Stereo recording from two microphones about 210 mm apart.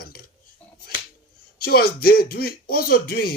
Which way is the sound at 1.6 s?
45° left (ahead or behind).